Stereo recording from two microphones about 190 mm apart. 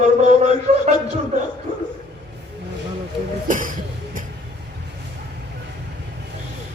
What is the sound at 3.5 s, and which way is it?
Cough, 45° right (ahead or behind).